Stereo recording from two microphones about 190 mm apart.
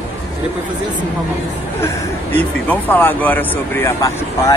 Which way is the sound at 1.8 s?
10° left (ahead or behind).